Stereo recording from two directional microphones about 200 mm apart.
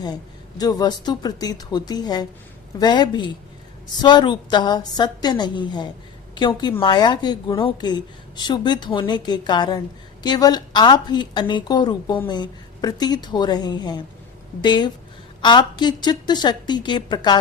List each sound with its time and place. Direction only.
0.6 s a woman's voice: 20° left (ahead or behind)